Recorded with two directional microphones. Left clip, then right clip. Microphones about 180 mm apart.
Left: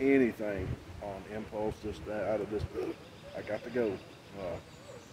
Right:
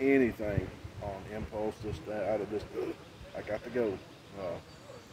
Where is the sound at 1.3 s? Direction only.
10° right (ahead or behind).